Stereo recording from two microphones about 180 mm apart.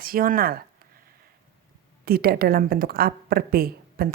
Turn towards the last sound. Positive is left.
turn(degrees=-55)  # may be behind; listen again after turning